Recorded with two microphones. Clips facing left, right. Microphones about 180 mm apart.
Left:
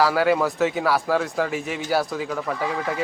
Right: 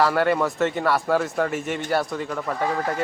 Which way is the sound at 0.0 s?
Centre (ahead or behind).